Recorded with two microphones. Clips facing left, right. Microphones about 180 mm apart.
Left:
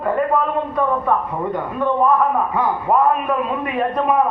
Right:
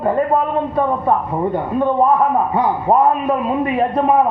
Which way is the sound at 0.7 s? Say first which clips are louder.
Right 2 dB; 30° right (ahead or behind).